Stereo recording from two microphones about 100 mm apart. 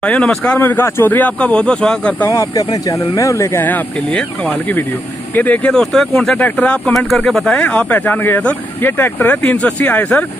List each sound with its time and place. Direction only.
0.0 s speech: 10° left (ahead or behind)
2.5 s speech: 35° left (ahead or behind)
3.6 s speech: 15° left (ahead or behind)
5.3 s speech: 15° left (ahead or behind)